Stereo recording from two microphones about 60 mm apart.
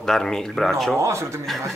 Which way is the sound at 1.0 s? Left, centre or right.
Right.